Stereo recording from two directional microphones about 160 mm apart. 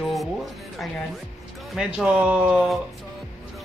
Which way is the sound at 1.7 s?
5° right (ahead or behind).